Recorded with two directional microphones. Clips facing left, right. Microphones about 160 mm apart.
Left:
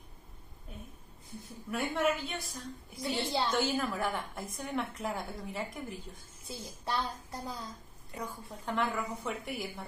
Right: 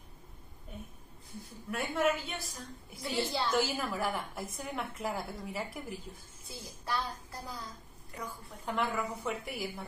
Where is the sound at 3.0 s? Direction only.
25° left (ahead or behind).